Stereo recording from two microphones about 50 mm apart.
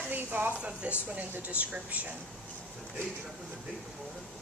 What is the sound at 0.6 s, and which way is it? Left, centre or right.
Speech, right.